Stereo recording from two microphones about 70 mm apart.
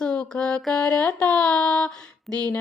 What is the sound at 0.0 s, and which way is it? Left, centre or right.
Mantra, centre.